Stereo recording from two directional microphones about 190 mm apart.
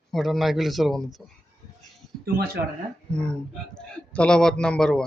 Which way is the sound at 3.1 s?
5° left (ahead or behind).